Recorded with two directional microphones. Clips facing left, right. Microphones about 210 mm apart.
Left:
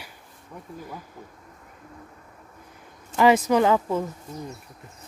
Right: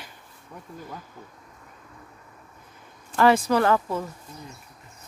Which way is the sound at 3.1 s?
15° left (ahead or behind).